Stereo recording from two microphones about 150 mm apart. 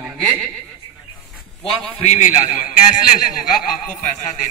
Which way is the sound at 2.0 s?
50° left (ahead or behind).